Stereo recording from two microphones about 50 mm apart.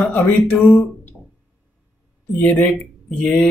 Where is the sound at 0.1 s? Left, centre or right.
Left.